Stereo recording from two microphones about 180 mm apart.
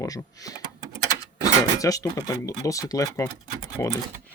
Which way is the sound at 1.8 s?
20° left (ahead or behind).